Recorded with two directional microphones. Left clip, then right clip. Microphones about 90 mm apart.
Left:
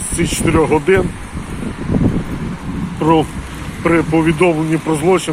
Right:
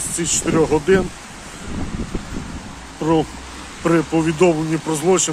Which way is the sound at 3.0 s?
50° right (ahead or behind).